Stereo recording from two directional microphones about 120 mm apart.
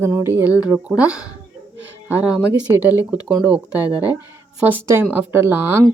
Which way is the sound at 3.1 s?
10° right (ahead or behind).